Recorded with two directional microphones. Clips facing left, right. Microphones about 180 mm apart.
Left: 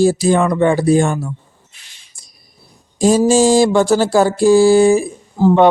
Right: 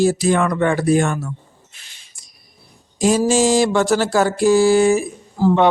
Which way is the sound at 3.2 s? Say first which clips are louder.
Left 5 dB; 30° left (ahead or behind).